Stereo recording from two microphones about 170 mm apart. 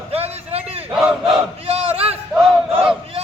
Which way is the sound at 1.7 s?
35° right (ahead or behind).